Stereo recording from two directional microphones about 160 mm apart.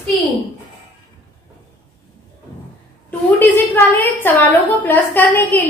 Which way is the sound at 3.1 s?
10° left (ahead or behind).